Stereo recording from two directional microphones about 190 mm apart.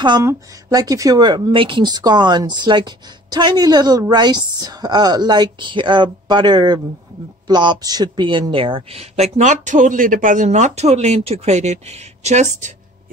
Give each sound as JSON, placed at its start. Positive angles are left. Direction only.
{"t": 0.0, "sound": "speech", "side_deg": -20}